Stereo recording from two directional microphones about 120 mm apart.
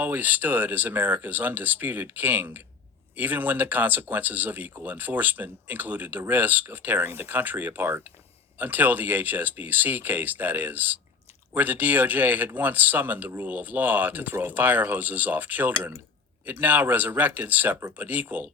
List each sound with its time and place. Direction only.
0.0 s speech: 15° right (ahead or behind)